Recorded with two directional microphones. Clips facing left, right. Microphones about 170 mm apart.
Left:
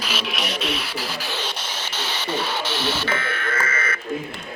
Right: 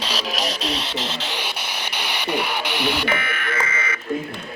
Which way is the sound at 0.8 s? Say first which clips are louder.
Right 2 dB; 20° right (ahead or behind).